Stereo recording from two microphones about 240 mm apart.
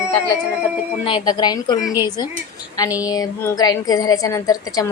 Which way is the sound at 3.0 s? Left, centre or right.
Centre.